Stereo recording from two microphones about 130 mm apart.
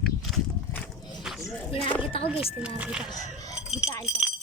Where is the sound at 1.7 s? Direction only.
40° left (ahead or behind).